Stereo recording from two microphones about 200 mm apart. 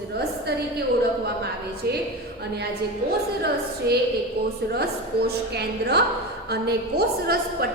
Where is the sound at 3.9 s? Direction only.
50° right (ahead or behind).